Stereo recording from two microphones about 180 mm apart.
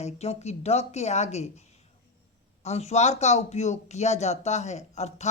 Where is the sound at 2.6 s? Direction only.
35° left (ahead or behind).